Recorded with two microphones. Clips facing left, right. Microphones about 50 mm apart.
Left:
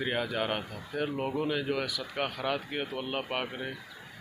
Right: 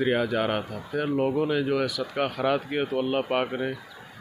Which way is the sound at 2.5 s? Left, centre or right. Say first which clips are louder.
Right 8 dB; centre.